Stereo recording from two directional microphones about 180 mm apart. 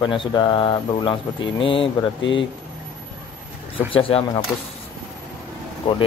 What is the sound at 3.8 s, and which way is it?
Speech, 30° left (ahead or behind).